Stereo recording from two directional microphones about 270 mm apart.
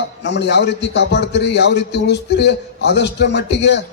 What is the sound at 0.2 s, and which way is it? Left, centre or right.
A man's voice, left.